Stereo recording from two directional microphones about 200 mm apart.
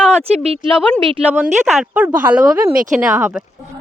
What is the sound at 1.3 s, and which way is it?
Speech, 5° right (ahead or behind).